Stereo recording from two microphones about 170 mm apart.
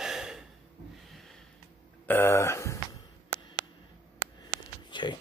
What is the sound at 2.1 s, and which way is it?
Speech, 15° left (ahead or behind).